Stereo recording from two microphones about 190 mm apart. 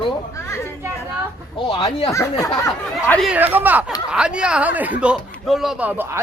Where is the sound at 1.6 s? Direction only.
25° left (ahead or behind).